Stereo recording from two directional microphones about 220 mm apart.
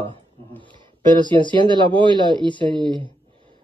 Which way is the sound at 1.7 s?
20° right (ahead or behind).